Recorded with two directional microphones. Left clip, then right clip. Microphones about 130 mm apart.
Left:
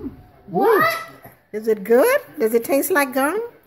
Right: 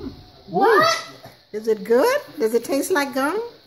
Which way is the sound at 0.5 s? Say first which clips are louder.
Even; 10° left (ahead or behind).